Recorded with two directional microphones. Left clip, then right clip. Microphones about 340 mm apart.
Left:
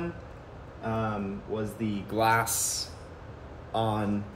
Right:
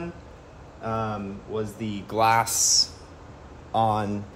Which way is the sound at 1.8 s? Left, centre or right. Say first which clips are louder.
Right 5 dB; centre.